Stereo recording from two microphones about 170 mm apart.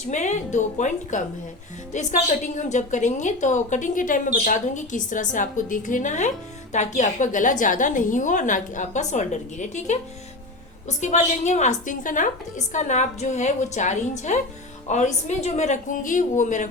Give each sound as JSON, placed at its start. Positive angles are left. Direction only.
{"t": 0.0, "sound": "a woman's voice", "side_deg": 45}